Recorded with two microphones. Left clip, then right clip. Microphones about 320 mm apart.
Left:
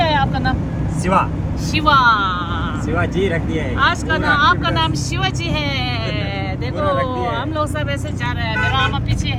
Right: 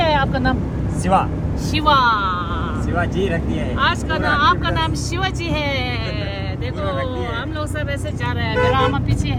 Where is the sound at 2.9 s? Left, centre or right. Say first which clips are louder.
Left 2 dB; centre.